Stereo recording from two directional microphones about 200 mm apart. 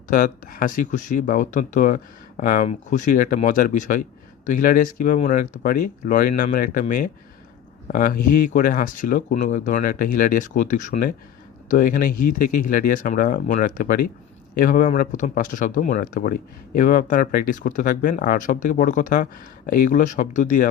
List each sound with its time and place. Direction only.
0.1 s speech: 45° left (ahead or behind)